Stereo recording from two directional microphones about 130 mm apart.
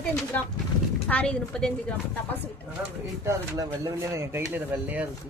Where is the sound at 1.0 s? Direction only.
10° left (ahead or behind).